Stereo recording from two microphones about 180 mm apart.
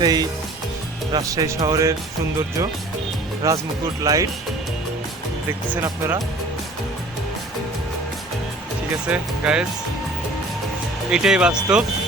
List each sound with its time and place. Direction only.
0.0 s speech: 20° right (ahead or behind)
3.4 s speech: 15° right (ahead or behind)
5.5 s speech: 10° right (ahead or behind)
9.1 s speech: 5° right (ahead or behind)
11.1 s speech: 5° right (ahead or behind)